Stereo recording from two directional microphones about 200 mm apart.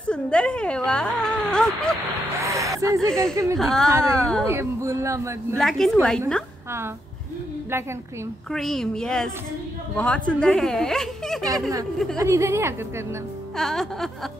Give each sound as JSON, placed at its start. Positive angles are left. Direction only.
{"t": 0.1, "sound": "a woman's voice", "side_deg": 5}
{"t": 2.4, "sound": "a sound", "side_deg": -15}
{"t": 3.1, "sound": "speech", "side_deg": 5}
{"t": 4.5, "sound": "speech", "side_deg": -15}
{"t": 5.6, "sound": "speech", "side_deg": 0}
{"t": 8.5, "sound": "speech", "side_deg": 0}
{"t": 12.2, "sound": "speech", "side_deg": -15}
{"t": 13.6, "sound": "speech", "side_deg": 0}